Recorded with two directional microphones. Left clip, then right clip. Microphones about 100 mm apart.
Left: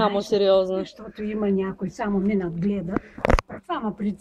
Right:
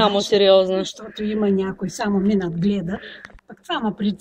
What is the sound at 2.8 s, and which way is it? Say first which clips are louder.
Speech: left 1 dB; 10° right (ahead or behind).